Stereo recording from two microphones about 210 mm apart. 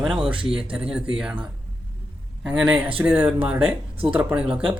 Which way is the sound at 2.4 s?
5° right (ahead or behind).